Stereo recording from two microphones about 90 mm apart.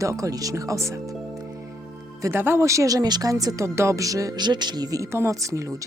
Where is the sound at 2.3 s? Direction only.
25° right (ahead or behind).